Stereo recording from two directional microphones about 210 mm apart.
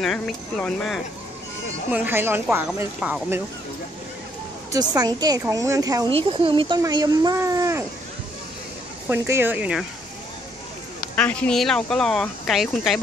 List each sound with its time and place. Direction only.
0.0 s speech: centre (ahead or behind)
1.9 s speech: 10° right (ahead or behind)
4.7 s speech: 20° right (ahead or behind)
9.1 s speech: 10° right (ahead or behind)
11.1 s speech: 5° left (ahead or behind)